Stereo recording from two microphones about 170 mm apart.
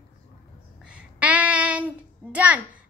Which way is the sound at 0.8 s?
5° right (ahead or behind).